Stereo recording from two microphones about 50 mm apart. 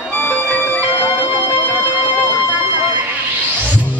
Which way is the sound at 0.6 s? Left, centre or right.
Left.